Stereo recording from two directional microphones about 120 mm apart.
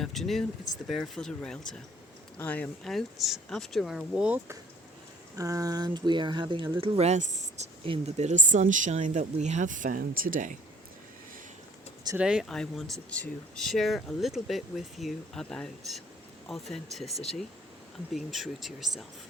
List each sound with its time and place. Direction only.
0.0 s speech: centre (ahead or behind)
2.9 s speech: centre (ahead or behind)
5.4 s speech: 30° right (ahead or behind)
6.7 s speech: 50° right (ahead or behind); by 10.0 s 90° right
12.1 s speech: 5° right (ahead or behind)
12.5 s speech: 5° left (ahead or behind)
18.1 s speech: centre (ahead or behind)